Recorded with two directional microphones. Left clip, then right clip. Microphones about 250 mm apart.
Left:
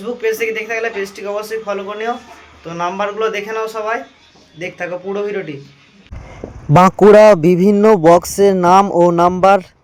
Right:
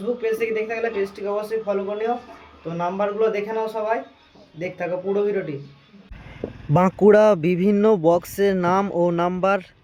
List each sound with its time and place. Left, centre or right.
0.2 s a man's voice: centre
6.7 s a man's voice: centre